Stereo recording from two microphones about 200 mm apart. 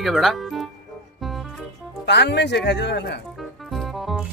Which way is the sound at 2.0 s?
60° left (ahead or behind).